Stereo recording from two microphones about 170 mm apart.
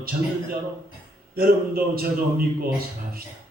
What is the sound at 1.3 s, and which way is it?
A man's voice, 60° right (ahead or behind).